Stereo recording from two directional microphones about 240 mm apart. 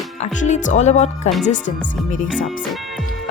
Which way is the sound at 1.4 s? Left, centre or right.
Left.